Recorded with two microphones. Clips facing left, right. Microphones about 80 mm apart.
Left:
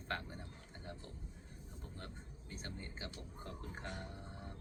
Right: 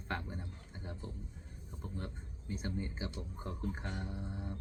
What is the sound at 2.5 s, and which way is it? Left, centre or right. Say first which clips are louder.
Speech: right 9 dB; centre.